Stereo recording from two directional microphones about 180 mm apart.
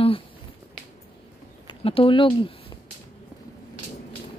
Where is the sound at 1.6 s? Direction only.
30° left (ahead or behind).